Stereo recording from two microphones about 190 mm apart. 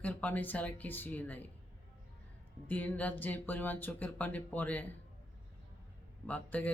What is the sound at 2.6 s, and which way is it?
Speech, 10° left (ahead or behind).